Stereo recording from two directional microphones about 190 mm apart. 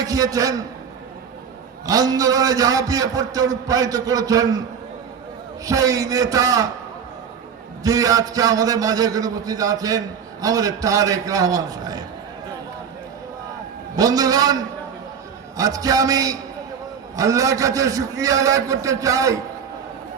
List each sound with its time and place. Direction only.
0.0 s a man's voice: 20° right (ahead or behind)
1.9 s a man's voice: 20° right (ahead or behind)
5.6 s a man's voice: 20° right (ahead or behind)
7.9 s a man's voice: 20° right (ahead or behind)
13.9 s a man's voice: 20° right (ahead or behind)